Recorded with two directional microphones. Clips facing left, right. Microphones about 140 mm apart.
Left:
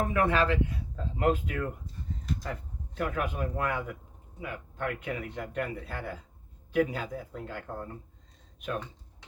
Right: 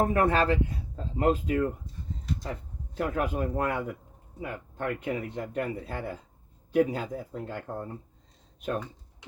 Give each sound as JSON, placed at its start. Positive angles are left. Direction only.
{"t": 0.0, "sound": "speech", "side_deg": -40}